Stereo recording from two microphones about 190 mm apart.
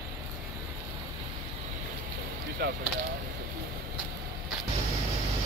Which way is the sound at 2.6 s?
60° right (ahead or behind).